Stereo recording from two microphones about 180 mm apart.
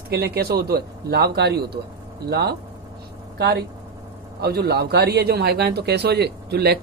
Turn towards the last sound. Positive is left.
turn(degrees=-65)  # may be behind; listen again after turning